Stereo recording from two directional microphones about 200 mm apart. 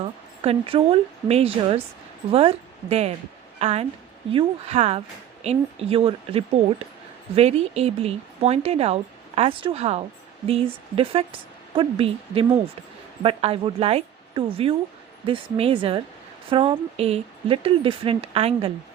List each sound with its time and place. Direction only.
0.0 s a woman's voice: 30° right (ahead or behind)